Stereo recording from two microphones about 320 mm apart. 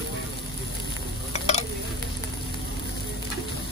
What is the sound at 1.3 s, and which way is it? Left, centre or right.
Stir, left.